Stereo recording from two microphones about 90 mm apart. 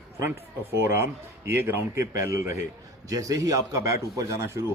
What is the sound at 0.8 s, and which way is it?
A man's voice, 30° right (ahead or behind).